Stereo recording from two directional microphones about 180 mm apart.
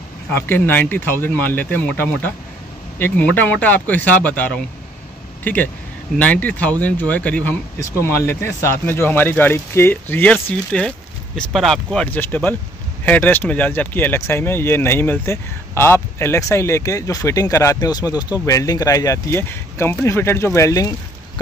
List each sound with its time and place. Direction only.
0.3 s speech: 10° left (ahead or behind)